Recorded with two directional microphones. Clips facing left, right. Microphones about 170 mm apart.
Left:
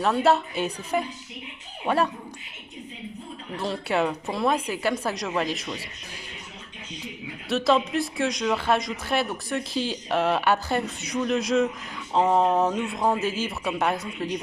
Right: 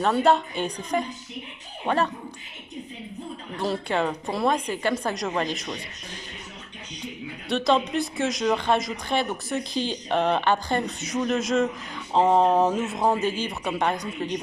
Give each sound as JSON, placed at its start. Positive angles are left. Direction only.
{"t": 0.0, "sound": "speech", "side_deg": 5}
{"t": 3.6, "sound": "speech", "side_deg": 5}
{"t": 7.4, "sound": "speech", "side_deg": 0}